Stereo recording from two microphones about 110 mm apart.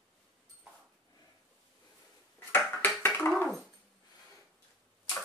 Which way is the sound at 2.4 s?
20° left (ahead or behind).